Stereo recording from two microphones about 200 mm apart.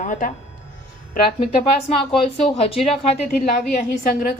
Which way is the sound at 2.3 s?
30° left (ahead or behind).